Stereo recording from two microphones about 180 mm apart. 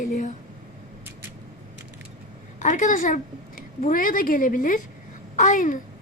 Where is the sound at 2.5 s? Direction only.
45° left (ahead or behind).